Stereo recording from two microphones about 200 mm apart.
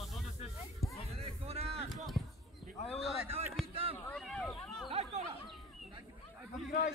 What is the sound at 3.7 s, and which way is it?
Run, 30° right (ahead or behind).